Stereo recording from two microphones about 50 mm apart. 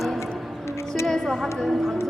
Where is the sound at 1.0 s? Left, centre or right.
Centre.